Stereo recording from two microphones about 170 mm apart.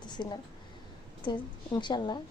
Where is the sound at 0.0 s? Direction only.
25° left (ahead or behind).